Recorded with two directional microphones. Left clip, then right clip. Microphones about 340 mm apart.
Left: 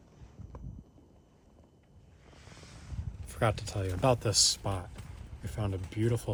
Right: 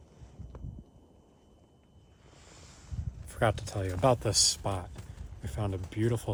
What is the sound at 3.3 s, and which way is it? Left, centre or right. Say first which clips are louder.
Speech: right 2 dB; centre.